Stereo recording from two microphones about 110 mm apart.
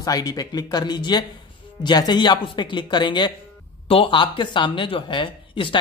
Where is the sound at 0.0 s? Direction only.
35° left (ahead or behind).